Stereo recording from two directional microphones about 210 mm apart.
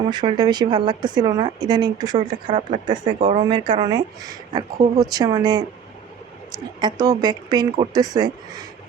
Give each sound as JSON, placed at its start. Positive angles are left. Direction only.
{"t": 0.1, "sound": "a woman's voice", "side_deg": -20}
{"t": 2.6, "sound": "speech", "side_deg": -40}
{"t": 3.5, "sound": "a woman's voice", "side_deg": -20}